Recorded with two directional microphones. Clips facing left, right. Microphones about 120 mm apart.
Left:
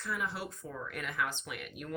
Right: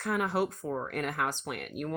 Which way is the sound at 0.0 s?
60° right (ahead or behind).